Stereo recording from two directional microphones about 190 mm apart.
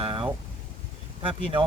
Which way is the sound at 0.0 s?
30° right (ahead or behind).